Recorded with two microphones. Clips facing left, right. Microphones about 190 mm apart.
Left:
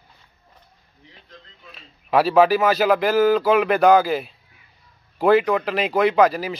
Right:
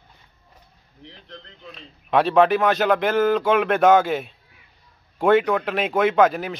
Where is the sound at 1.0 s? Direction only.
70° right (ahead or behind).